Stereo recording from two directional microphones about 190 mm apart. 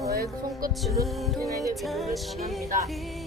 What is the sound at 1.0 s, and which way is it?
Music, 15° right (ahead or behind).